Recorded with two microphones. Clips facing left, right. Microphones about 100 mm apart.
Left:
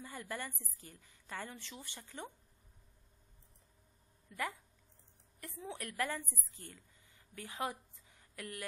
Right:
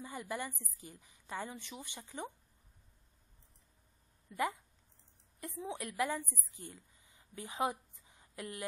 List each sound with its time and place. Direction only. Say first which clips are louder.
0.0 s a woman's voice: right 3 dB; 15° right (ahead or behind)
4.3 s a woman's voice: right 5 dB; 15° right (ahead or behind)